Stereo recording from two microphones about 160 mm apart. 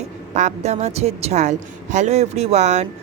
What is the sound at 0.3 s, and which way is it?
A woman's voice, 45° right (ahead or behind).